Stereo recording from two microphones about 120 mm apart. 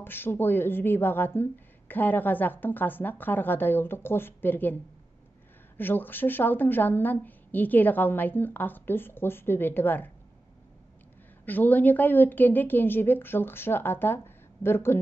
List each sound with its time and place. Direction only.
0.0 s speech: 20° left (ahead or behind)
5.8 s speech: 15° left (ahead or behind)
11.4 s speech: 15° left (ahead or behind)